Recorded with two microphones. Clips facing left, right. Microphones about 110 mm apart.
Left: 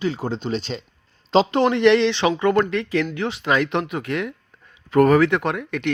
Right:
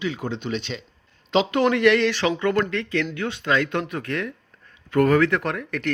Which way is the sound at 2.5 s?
30° left (ahead or behind).